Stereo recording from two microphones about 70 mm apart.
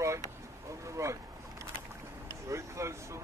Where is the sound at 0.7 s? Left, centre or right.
Right.